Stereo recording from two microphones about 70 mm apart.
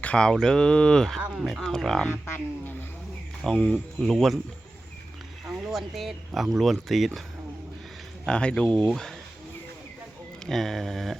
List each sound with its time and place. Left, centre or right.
0.0 s speech: centre
1.3 s speech: centre
2.0 s speech: left
3.4 s speech: centre
5.7 s speech: centre
8.3 s speech: centre
10.4 s speech: centre